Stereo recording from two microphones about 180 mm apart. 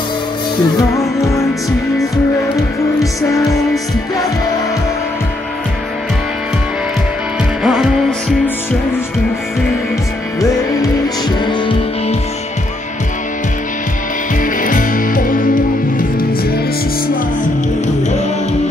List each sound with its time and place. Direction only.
0.7 s music: 15° left (ahead or behind)
7.6 s music: centre (ahead or behind)
10.4 s music: 20° left (ahead or behind)
14.4 s music: 50° left (ahead or behind)